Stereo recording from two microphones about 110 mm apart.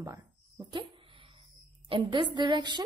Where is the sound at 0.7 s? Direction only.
50° right (ahead or behind).